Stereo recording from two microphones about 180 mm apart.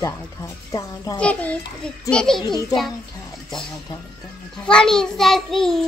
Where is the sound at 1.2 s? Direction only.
5° left (ahead or behind).